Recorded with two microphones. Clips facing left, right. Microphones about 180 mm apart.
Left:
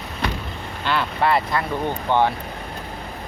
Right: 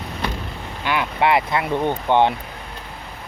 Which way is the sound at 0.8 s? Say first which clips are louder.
Right 1 dB; 15° right (ahead or behind).